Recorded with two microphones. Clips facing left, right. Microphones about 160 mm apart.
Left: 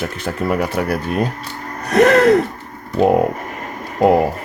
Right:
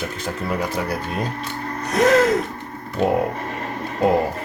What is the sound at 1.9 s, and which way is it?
Speech, 65° left (ahead or behind).